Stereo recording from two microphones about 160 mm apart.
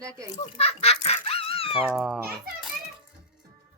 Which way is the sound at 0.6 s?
40° left (ahead or behind).